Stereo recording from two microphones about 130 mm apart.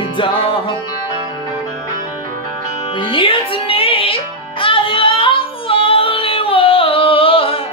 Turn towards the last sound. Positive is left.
turn(degrees=45)  # may be behind; listen again after turning